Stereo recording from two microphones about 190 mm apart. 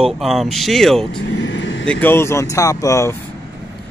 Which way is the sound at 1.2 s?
75° left (ahead or behind).